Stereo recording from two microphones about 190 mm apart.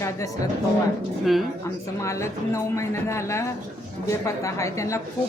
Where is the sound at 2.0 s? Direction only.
15° left (ahead or behind).